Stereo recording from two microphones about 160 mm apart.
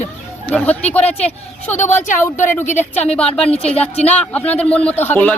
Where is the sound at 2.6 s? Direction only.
45° left (ahead or behind).